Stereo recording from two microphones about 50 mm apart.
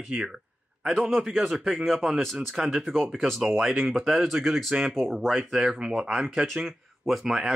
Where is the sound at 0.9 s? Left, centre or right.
Centre.